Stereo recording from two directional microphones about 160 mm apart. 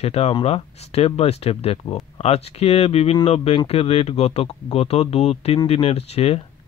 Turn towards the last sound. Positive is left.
turn(degrees=40)  # may be behind; listen again after turning